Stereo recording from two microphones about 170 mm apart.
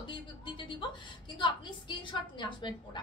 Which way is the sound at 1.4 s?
30° left (ahead or behind).